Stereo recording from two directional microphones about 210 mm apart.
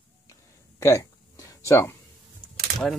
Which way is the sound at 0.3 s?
15° left (ahead or behind).